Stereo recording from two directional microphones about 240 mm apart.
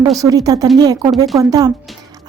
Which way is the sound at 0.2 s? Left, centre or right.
Centre.